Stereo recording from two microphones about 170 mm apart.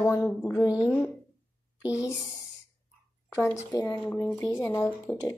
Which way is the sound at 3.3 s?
15° left (ahead or behind).